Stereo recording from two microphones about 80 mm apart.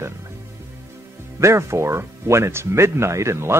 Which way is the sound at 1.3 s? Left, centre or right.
Right.